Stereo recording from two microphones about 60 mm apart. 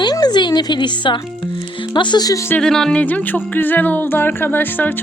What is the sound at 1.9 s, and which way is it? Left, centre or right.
Speech, left.